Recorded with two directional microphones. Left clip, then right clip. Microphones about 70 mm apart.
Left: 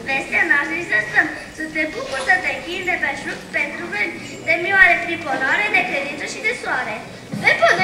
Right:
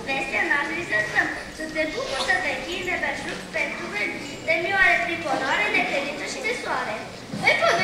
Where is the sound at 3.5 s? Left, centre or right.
Left.